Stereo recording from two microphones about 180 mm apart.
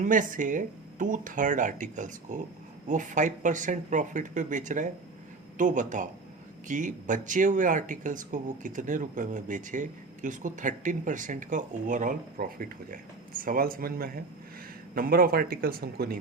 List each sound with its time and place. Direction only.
0.0 s speech: 45° right (ahead or behind)